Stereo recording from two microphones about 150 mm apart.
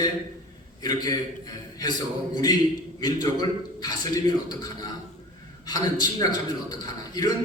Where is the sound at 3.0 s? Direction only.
25° left (ahead or behind).